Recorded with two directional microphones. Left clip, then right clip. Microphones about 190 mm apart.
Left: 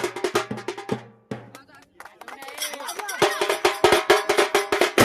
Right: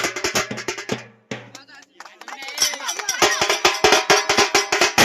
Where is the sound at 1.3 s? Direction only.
35° left (ahead or behind).